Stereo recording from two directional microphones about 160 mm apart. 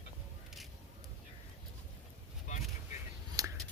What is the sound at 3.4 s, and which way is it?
Scissors, 20° right (ahead or behind).